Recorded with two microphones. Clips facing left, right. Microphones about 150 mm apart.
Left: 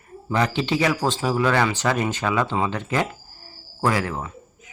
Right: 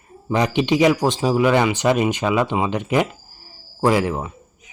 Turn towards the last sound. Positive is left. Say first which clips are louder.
# right 2 dB
turn(degrees=-20)  # may be behind; listen again after turning